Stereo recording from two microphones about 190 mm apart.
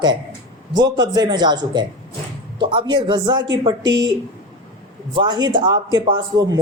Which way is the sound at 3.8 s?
75° right (ahead or behind).